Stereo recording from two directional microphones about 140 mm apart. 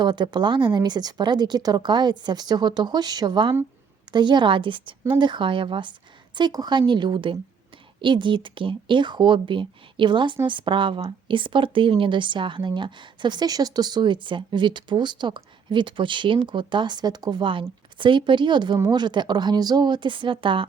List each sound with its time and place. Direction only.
0.0 s speech: 30° right (ahead or behind)